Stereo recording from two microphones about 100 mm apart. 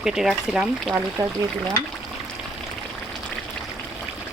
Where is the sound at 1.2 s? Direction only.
30° right (ahead or behind).